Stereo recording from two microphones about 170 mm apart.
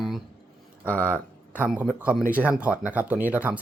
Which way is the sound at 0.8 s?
10° left (ahead or behind).